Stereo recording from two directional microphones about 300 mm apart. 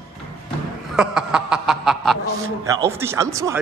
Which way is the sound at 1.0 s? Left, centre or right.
Centre.